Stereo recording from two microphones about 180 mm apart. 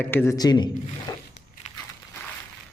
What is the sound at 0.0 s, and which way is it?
Speech, 10° left (ahead or behind).